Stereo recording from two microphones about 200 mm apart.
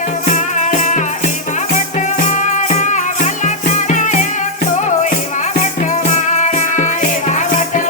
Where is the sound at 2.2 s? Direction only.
35° left (ahead or behind).